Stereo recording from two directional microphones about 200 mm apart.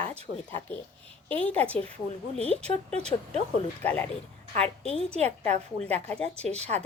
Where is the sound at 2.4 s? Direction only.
5° left (ahead or behind).